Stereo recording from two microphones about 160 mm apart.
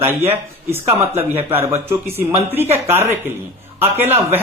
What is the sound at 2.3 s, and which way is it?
Speech, 40° right (ahead or behind).